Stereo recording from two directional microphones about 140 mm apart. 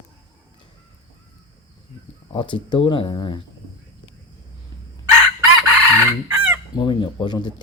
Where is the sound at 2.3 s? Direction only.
35° left (ahead or behind).